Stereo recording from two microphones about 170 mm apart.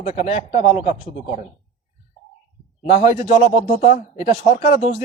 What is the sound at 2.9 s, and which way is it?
Speech, 35° left (ahead or behind).